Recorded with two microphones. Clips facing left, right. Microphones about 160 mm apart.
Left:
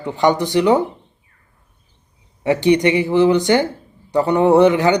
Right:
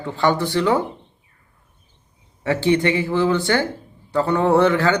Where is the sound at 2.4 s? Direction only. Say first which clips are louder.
Left 4 dB; 15° left (ahead or behind).